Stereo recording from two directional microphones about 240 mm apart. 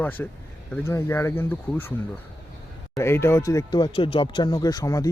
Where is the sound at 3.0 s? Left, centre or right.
Centre.